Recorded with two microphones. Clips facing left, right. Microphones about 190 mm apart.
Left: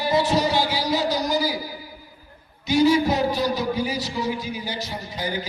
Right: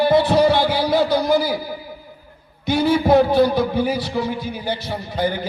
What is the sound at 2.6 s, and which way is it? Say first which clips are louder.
A man's voice: even; 55° right (ahead or behind).